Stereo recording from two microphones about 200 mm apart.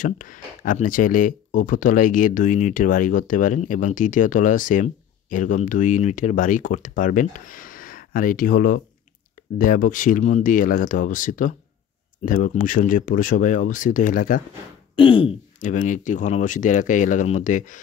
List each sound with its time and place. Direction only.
0.0 s speech: 40° left (ahead or behind)
15.0 s throat clearing: 25° left (ahead or behind)
15.6 s speech: 40° left (ahead or behind)